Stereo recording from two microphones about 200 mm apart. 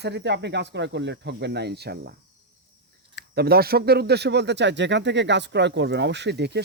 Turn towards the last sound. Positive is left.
turn(degrees=-55)  # may be behind; listen again after turning